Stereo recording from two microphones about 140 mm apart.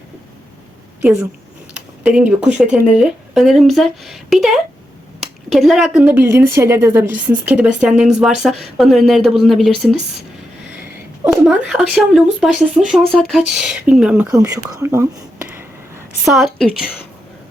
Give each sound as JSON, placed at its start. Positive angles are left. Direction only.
{"t": 1.7, "sound": "a sound", "side_deg": -10}
{"t": 2.7, "sound": "speech", "side_deg": -10}
{"t": 11.3, "sound": "speech", "side_deg": -5}
{"t": 14.3, "sound": "whispering", "side_deg": -25}
{"t": 16.2, "sound": "speech", "side_deg": 0}